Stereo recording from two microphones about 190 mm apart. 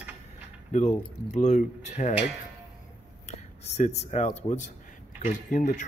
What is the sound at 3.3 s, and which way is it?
Speech, 35° left (ahead or behind).